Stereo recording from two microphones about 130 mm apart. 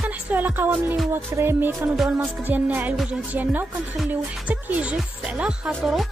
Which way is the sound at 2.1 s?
15° right (ahead or behind).